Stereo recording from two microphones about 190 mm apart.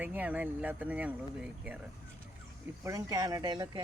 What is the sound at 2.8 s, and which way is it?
Speech, 15° right (ahead or behind).